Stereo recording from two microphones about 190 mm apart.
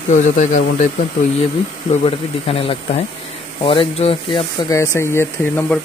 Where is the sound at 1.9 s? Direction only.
30° left (ahead or behind).